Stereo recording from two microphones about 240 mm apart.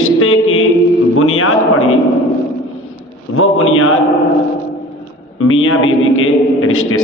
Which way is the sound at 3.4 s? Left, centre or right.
Left.